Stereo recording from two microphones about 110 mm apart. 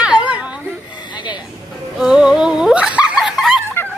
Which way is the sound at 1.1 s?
45° left (ahead or behind).